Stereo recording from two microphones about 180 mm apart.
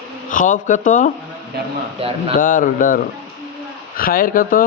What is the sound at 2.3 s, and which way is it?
Speech, 50° left (ahead or behind).